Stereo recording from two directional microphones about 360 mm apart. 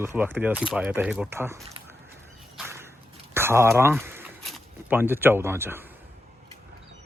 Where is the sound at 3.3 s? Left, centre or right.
Centre.